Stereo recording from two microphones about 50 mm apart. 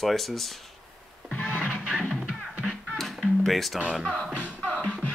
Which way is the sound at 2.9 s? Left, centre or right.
Centre.